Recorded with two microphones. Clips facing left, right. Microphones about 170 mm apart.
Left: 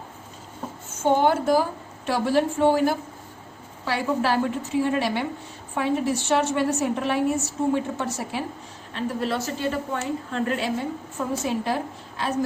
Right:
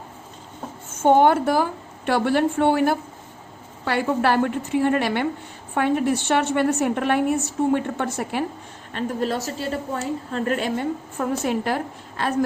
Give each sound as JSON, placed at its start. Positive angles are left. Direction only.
{"t": 1.0, "sound": "a woman's voice", "side_deg": -55}
{"t": 8.9, "sound": "a woman's voice", "side_deg": -50}